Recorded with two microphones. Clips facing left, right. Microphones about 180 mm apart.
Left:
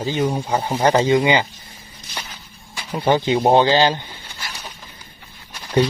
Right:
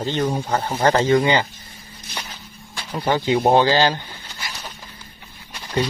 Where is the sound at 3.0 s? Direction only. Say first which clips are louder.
Left 2 dB; 20° left (ahead or behind).